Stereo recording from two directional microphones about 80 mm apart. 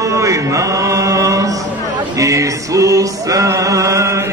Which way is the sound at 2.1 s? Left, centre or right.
Right.